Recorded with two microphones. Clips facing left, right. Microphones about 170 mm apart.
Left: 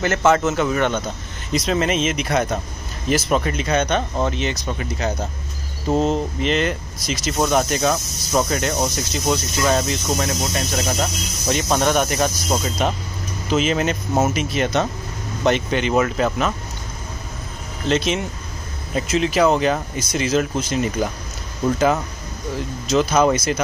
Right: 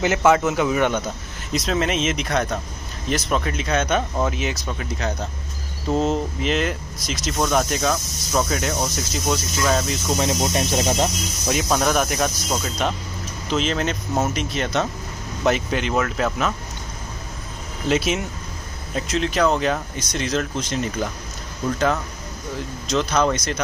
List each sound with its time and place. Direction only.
0.0 s speech: 10° right (ahead or behind)
1.5 s speech: centre (ahead or behind)
10.1 s speech: 20° right (ahead or behind)
11.4 s speech: centre (ahead or behind)
17.8 s speech: 5° right (ahead or behind)
18.9 s speech: 5° left (ahead or behind)
22.8 s speech: 5° left (ahead or behind)